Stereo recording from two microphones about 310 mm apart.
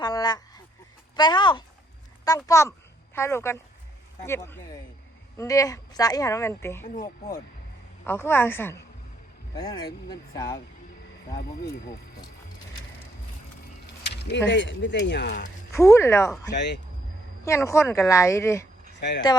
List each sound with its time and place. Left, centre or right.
0.0 s a sound: centre
4.3 s a woman's voice: centre
8.0 s a woman's voice: centre
14.0 s speech: left
15.7 s a woman's voice: centre
16.5 s speech: left
17.4 s a woman's voice: centre
18.9 s speech: left